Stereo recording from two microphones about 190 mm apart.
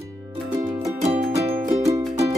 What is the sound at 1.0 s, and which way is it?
Music, 30° right (ahead or behind).